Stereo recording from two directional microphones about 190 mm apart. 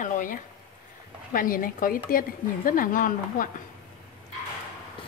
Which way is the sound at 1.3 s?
45° left (ahead or behind).